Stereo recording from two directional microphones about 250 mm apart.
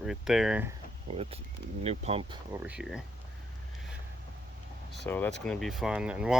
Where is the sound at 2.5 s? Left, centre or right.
Centre.